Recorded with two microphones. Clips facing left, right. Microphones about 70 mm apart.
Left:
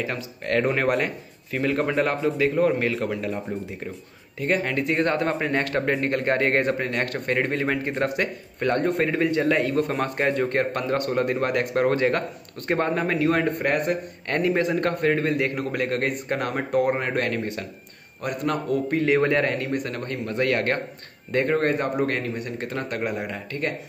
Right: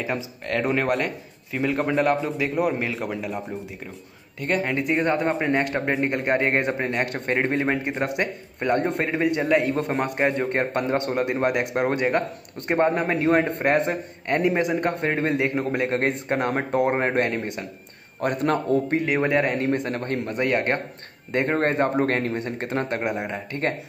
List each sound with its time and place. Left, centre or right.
0.5 s speech: centre
10.5 s speech: right
18.2 s a man's voice: right
18.9 s speech: centre
19.6 s a man's voice: right
20.3 s a man's voice: right